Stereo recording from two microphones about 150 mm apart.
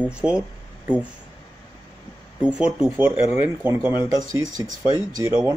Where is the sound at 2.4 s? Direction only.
5° right (ahead or behind).